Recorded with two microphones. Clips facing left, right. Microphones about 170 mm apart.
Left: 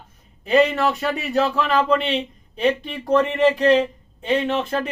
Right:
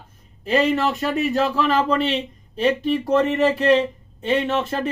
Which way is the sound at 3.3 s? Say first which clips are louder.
Left 1 dB; centre (ahead or behind).